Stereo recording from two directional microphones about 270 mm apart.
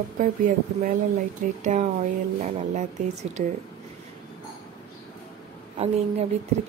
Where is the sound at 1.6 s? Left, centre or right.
Right.